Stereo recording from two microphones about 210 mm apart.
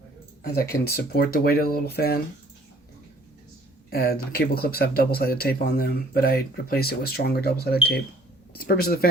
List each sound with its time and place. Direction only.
0.4 s speech: 45° left (ahead or behind)
3.8 s speech: 45° left (ahead or behind)